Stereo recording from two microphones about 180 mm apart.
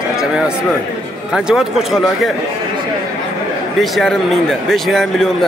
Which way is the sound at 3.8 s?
Centre (ahead or behind).